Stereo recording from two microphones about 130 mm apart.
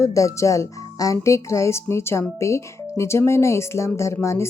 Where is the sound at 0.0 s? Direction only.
25° left (ahead or behind).